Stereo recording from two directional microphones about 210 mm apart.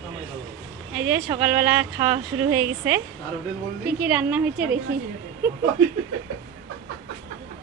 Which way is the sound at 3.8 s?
5° right (ahead or behind).